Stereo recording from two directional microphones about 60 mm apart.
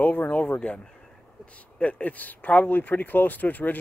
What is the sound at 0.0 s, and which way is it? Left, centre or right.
Speech, left.